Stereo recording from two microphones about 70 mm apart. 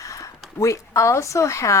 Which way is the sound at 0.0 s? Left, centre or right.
Left.